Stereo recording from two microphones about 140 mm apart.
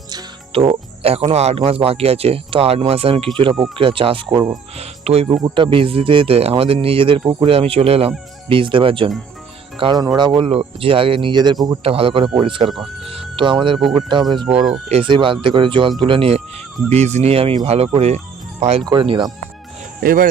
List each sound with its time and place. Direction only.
0.5 s speech: 45° right (ahead or behind)
4.8 s speech: 45° right (ahead or behind)
5.3 s speech: 30° right (ahead or behind)
7.3 s speech: 30° right (ahead or behind)
7.5 s speech: 45° right (ahead or behind)
10.5 s speech: 45° right (ahead or behind)
13.1 s music: 40° right (ahead or behind)
13.8 s speech: 35° right (ahead or behind)
16.9 s speech: 50° right (ahead or behind)
18.9 s speech: 35° right (ahead or behind)
20.0 s speech: 90° right